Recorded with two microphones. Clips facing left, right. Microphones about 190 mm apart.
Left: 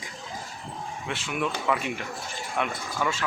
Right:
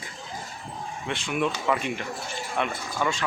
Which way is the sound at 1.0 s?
5° left (ahead or behind).